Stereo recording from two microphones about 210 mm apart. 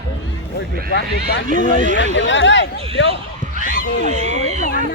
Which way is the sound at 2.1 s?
60° left (ahead or behind).